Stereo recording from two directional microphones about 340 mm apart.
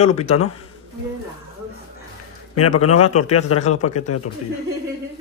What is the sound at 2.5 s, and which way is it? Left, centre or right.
A man's voice, left.